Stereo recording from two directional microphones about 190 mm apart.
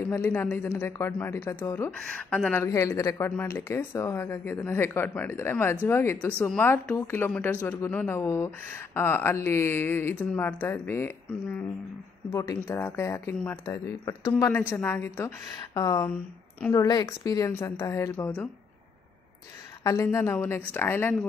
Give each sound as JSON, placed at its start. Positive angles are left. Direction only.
{"t": 0.1, "sound": "speech", "side_deg": 10}
{"t": 19.8, "sound": "speech", "side_deg": 15}